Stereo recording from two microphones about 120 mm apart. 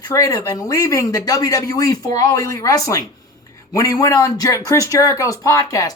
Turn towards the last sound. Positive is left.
turn(degrees=30)  # may be behind; listen again after turning